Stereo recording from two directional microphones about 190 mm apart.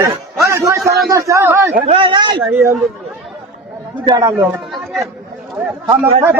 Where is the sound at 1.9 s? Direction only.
25° right (ahead or behind).